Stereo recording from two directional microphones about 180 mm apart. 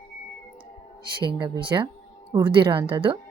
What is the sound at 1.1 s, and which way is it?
Speech, 25° right (ahead or behind).